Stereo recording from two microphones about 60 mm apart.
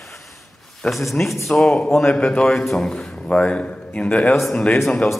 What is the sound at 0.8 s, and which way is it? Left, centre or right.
A man's voice, centre.